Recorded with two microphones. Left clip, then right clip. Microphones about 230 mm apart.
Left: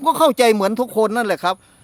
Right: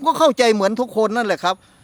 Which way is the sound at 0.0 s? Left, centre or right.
Centre.